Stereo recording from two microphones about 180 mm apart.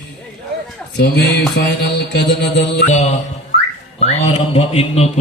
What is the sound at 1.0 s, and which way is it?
Speech, 70° left (ahead or behind).